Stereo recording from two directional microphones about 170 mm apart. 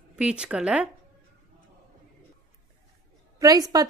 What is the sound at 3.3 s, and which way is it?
Speech, 20° right (ahead or behind).